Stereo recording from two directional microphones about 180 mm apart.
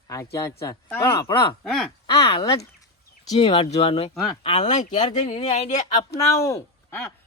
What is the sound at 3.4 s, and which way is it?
Speech, 30° left (ahead or behind).